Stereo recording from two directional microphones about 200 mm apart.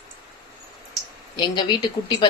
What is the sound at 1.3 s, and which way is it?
Speech, 20° left (ahead or behind).